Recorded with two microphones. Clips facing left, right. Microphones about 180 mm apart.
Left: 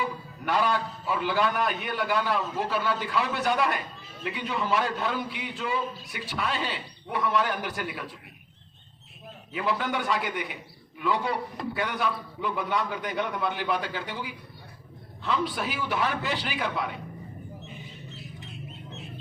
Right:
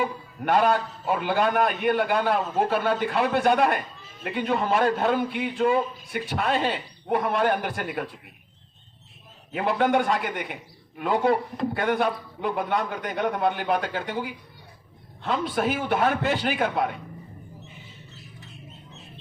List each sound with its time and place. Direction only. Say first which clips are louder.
0.0 s a man's voice: right 4 dB; 50° right (ahead or behind)
9.5 s a man's voice: right 6 dB; 55° right (ahead or behind)